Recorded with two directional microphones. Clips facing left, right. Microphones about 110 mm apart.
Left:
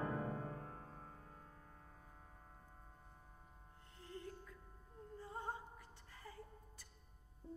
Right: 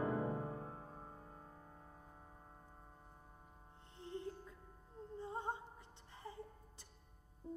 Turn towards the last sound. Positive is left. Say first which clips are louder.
# right 4 dB
turn(degrees=-25)  # may be behind; listen again after turning